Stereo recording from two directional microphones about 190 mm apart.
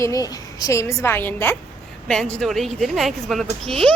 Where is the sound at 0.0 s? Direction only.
20° left (ahead or behind).